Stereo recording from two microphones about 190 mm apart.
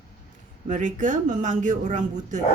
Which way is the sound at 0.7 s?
40° right (ahead or behind).